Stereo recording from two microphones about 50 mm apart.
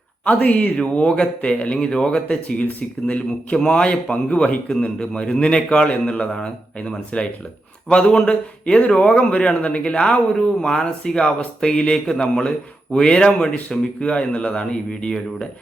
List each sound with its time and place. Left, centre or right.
0.3 s speech: left
0.8 s a man's voice: left